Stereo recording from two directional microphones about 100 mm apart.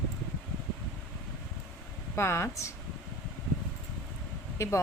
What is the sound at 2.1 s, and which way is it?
Speech, 25° left (ahead or behind).